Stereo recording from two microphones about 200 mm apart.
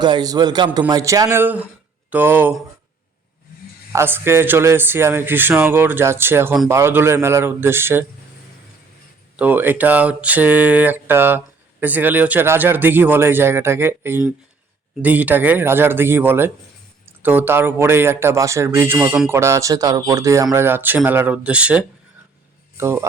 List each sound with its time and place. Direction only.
0.0 s a man's voice: 20° right (ahead or behind)
3.9 s speech: 10° right (ahead or behind)
9.3 s speech: 10° right (ahead or behind)